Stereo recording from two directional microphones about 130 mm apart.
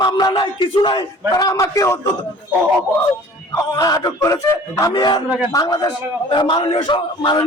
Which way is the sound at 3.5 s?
30° left (ahead or behind).